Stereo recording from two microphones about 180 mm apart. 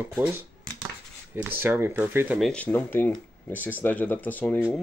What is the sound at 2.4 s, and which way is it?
Speech, 5° left (ahead or behind).